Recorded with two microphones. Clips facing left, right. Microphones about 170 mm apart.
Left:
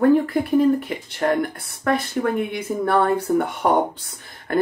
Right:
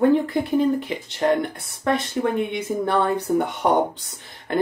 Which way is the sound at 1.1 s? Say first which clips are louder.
Even; 25° right (ahead or behind).